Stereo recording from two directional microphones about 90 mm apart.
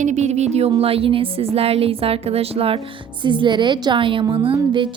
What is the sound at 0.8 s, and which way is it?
A woman's voice, 90° right.